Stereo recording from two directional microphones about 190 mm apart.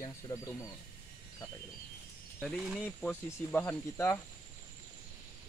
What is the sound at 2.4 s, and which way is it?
Speech, centre (ahead or behind).